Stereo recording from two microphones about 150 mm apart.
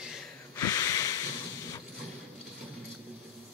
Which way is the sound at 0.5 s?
25° left (ahead or behind).